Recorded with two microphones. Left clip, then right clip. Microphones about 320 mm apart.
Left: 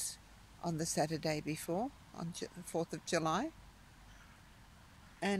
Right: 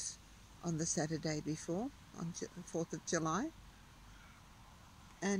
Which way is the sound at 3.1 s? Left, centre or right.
Centre.